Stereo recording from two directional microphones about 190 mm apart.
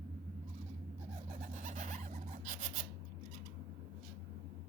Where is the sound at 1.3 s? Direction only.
40° right (ahead or behind).